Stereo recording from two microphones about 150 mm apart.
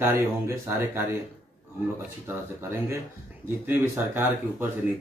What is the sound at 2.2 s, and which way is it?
Speech, 15° right (ahead or behind).